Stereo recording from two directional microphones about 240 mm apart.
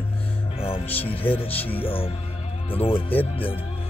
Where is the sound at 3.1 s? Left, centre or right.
Centre.